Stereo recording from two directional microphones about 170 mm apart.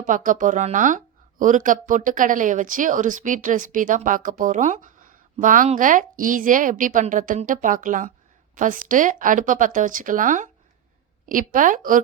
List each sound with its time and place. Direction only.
0.0 s speech: 50° right (ahead or behind)